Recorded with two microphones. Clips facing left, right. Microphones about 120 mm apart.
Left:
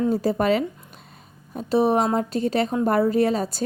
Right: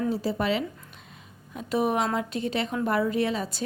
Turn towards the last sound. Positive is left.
turn(degrees=40)  # may be behind; listen again after turning